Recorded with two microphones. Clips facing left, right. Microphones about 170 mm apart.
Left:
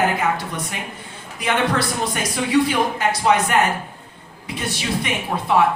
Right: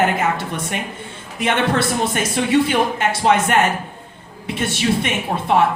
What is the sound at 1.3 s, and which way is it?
Speech, 25° right (ahead or behind).